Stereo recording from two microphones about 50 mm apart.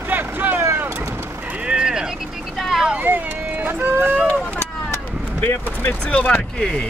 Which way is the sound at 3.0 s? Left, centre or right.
Right.